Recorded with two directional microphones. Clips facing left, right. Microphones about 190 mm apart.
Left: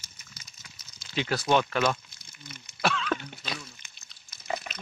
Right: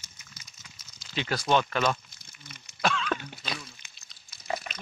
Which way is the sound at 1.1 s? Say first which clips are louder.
Left 1 dB; 10° left (ahead or behind).